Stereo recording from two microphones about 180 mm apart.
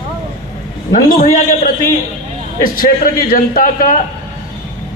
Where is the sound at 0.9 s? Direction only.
50° left (ahead or behind).